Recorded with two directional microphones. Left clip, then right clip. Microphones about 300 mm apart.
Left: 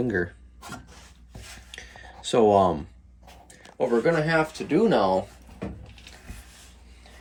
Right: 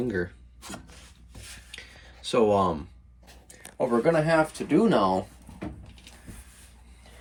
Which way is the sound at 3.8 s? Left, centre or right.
Centre.